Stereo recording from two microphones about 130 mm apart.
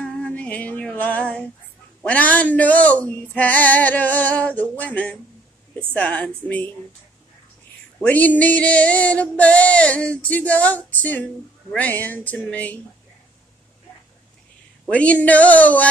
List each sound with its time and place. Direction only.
0.0 s female singing: 10° left (ahead or behind)
2.0 s music: 10° left (ahead or behind)
8.0 s music: 10° left (ahead or behind)
14.9 s music: 10° left (ahead or behind)